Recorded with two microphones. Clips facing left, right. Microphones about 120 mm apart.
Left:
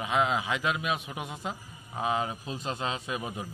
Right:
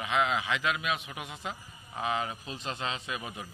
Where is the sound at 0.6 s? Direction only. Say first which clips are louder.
Left 1 dB; 35° left (ahead or behind).